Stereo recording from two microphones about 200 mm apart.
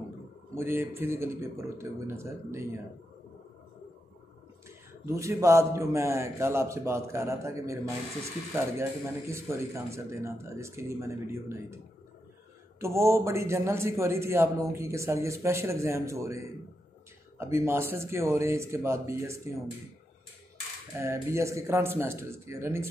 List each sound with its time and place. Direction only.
0.6 s a man's voice: 10° right (ahead or behind)
4.6 s a man's voice: 15° right (ahead or behind)
12.8 s a man's voice: 15° right (ahead or behind)
21.0 s a man's voice: 15° right (ahead or behind)